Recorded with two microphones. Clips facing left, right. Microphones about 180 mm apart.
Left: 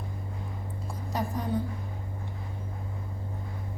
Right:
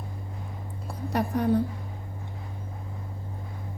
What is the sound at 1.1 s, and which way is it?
Speech, 65° right (ahead or behind).